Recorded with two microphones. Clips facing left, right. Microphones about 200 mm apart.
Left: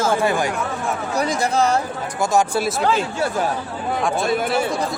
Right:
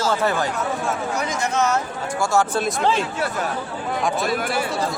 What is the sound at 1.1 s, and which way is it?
Speech, 35° left (ahead or behind).